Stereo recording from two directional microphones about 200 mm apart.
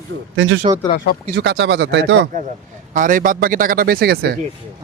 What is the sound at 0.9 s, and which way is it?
Speech, 45° left (ahead or behind).